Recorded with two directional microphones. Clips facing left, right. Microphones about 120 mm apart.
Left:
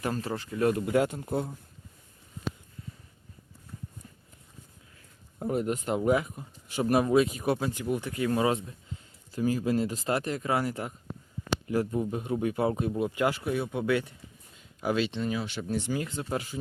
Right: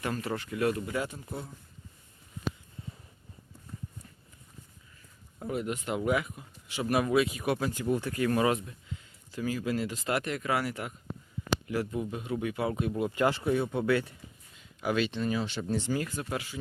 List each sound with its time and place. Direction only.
0.0 s speech: 30° left (ahead or behind)
0.9 s speech: 60° left (ahead or behind)
5.4 s speech: 40° left (ahead or behind)
7.7 s speech: 15° left (ahead or behind); by 12.9 s 35° left (ahead or behind)
13.0 s speech: 15° left (ahead or behind)
15.3 s speech: 10° left (ahead or behind)